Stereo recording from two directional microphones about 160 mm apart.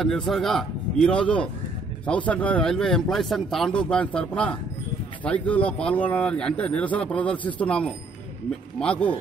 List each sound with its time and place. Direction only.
0.3 s a man's voice: centre (ahead or behind)